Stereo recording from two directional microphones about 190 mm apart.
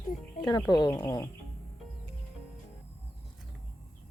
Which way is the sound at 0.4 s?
20° left (ahead or behind).